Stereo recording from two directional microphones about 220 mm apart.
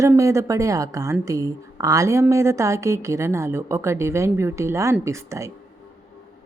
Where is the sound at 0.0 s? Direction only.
15° right (ahead or behind).